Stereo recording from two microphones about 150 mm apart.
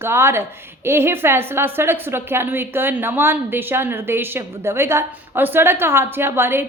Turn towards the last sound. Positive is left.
turn(degrees=-15)  # may be behind; listen again after turning